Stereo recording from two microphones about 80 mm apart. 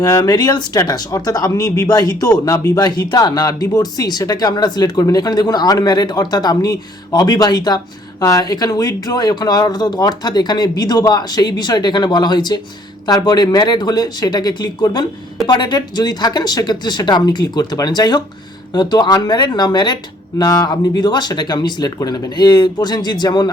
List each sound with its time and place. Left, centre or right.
0.0 s speech: left
2.8 s speech: left
8.2 s speech: left
20.4 s speech: left
21.9 s speech: left